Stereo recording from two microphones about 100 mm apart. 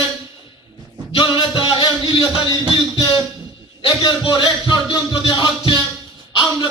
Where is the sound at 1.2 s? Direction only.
60° left (ahead or behind).